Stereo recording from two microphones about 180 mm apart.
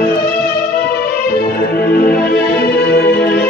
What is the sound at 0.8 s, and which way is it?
Music, 55° left (ahead or behind).